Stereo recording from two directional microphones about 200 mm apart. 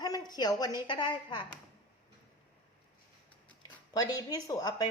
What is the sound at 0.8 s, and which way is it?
Speech, 20° left (ahead or behind).